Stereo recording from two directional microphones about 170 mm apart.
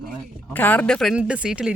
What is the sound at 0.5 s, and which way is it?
Speech, 10° left (ahead or behind).